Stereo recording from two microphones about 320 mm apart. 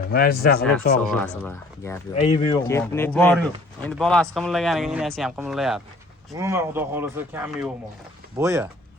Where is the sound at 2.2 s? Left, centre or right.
Centre.